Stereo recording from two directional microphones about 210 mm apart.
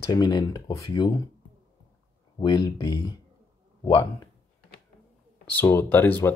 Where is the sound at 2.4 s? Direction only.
20° left (ahead or behind).